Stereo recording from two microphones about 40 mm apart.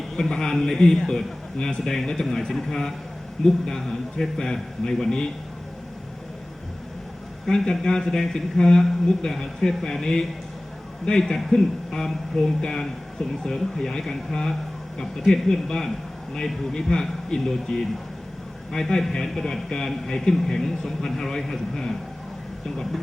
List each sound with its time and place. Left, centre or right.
0.2 s a man's voice: centre
7.4 s a man's voice: centre